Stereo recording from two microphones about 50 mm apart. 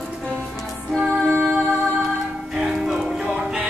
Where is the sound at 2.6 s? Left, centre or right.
Centre.